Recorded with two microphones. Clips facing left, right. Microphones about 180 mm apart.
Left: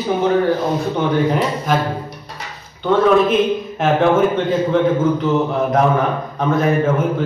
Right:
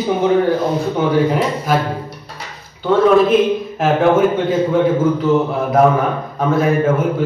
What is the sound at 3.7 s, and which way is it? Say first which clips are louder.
A man's voice: right 1 dB; centre (ahead or behind).